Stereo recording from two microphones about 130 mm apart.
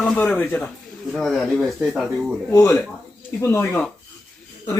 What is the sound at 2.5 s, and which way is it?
Speech, 25° left (ahead or behind).